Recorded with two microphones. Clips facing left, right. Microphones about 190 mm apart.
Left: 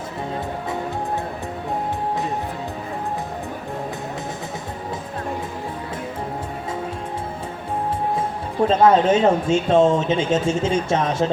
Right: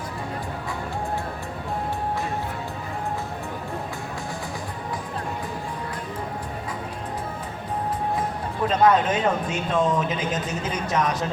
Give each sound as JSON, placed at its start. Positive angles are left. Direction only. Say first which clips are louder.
{"t": 8.6, "sound": "speech", "louder": "left 4 dB", "side_deg": 25}